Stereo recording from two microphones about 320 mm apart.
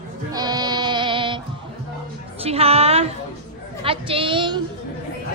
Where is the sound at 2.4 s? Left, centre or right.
Centre.